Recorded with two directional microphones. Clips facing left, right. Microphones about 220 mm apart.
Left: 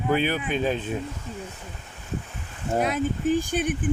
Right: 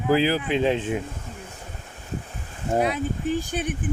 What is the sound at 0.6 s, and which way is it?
Speech, 25° right (ahead or behind).